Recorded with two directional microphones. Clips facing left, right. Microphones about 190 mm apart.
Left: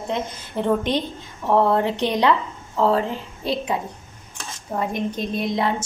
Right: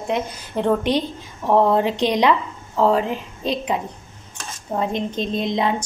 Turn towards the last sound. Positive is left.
turn(degrees=-20)  # may be behind; listen again after turning